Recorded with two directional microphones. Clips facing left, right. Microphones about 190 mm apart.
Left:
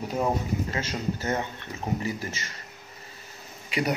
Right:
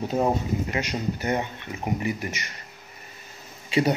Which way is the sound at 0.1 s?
20° right (ahead or behind).